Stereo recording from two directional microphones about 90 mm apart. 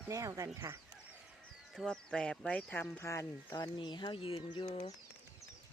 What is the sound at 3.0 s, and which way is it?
Speech, 35° left (ahead or behind).